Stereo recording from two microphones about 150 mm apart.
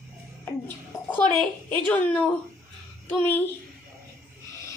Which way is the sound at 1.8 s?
10° left (ahead or behind).